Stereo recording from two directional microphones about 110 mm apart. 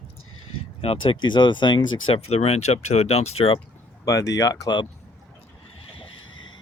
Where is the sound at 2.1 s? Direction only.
70° left (ahead or behind).